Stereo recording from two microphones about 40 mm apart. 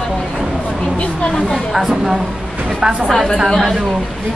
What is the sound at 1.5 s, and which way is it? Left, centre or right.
Speech, centre.